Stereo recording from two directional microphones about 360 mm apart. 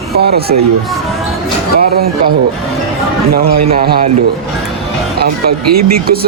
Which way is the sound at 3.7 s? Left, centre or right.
Right.